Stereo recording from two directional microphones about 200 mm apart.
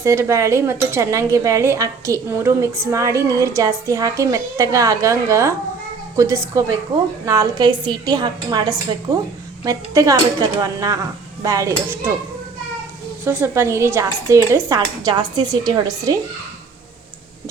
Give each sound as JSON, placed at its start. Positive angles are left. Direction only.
{"t": 0.0, "sound": "a woman's voice", "side_deg": -15}
{"t": 13.2, "sound": "speech", "side_deg": -10}